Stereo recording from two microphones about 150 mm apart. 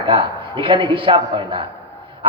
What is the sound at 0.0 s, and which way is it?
A man's voice, 30° right (ahead or behind).